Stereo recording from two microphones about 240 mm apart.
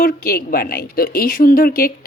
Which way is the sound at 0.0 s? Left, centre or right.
Left.